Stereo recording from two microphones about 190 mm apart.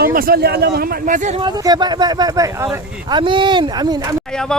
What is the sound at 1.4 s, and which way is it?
Speech, 20° right (ahead or behind).